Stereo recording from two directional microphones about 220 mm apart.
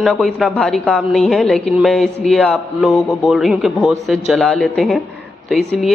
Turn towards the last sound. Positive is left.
turn(degrees=0)  # may be behind; listen again after turning